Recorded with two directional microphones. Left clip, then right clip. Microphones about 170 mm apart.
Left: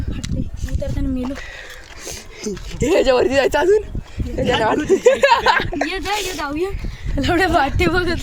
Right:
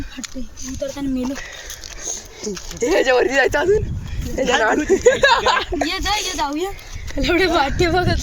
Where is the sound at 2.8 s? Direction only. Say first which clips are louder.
Left 1 dB; 45° left (ahead or behind).